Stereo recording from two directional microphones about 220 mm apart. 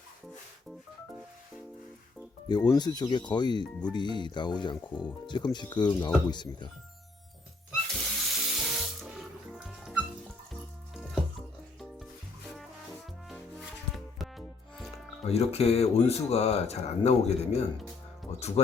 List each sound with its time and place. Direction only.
2.5 s speech: 20° left (ahead or behind)
7.9 s water: centre (ahead or behind)
9.6 s music: centre (ahead or behind)
13.9 s music: centre (ahead or behind)
15.3 s speech: 30° left (ahead or behind)